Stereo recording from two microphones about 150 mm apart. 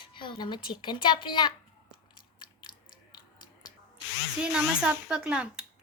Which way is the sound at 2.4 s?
30° left (ahead or behind).